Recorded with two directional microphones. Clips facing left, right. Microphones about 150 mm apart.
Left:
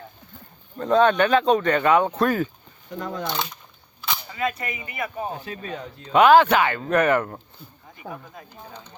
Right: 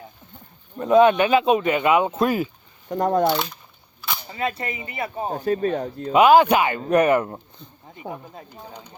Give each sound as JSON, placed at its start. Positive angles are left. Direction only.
{"t": 0.8, "sound": "speech", "side_deg": -10}
{"t": 3.0, "sound": "speech", "side_deg": -50}
{"t": 3.2, "sound": "speech", "side_deg": 0}
{"t": 4.3, "sound": "speech", "side_deg": -30}
{"t": 5.3, "sound": "speech", "side_deg": -45}
{"t": 6.1, "sound": "speech", "side_deg": -10}
{"t": 7.9, "sound": "speech", "side_deg": -25}